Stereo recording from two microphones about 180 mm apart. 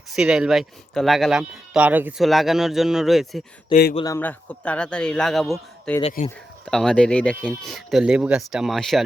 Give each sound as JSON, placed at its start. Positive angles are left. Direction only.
{"t": 0.1, "sound": "speech", "side_deg": -5}
{"t": 3.7, "sound": "speech", "side_deg": 30}
{"t": 4.0, "sound": "speech", "side_deg": 15}
{"t": 6.0, "sound": "speech", "side_deg": 35}
{"t": 6.7, "sound": "speech", "side_deg": 5}